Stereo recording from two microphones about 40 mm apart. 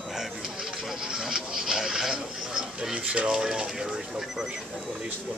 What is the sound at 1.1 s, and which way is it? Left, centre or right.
Speech, centre.